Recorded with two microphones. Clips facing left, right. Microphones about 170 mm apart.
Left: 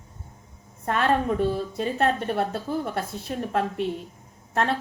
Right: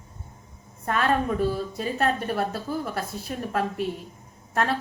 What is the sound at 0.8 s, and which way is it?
A woman's voice, 30° left (ahead or behind).